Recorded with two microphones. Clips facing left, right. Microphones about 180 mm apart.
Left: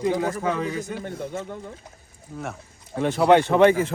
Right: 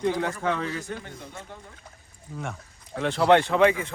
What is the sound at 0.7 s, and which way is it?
Speech, 20° left (ahead or behind).